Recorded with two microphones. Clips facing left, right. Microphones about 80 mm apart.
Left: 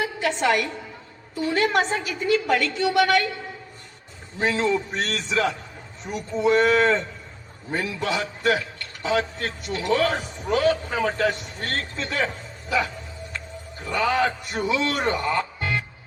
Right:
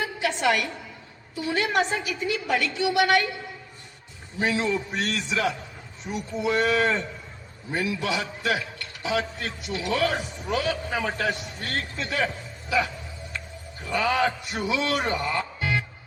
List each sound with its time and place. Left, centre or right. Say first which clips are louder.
0.3 s a man's voice: left 2 dB; left
4.4 s a man's voice: left 3 dB; left
13.9 s speech: left 1 dB; left